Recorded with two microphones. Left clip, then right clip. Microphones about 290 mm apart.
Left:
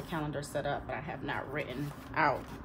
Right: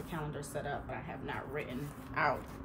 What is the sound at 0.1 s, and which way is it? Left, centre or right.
A woman's voice, left.